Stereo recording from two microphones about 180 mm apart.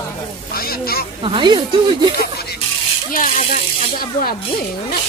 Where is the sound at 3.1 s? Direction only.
50° left (ahead or behind).